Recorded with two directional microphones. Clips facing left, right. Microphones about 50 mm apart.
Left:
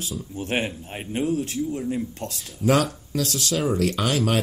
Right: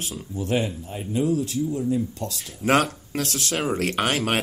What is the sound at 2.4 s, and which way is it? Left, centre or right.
Speech, right.